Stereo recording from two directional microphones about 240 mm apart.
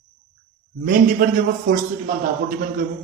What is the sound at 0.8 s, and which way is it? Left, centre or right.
A man's voice, right.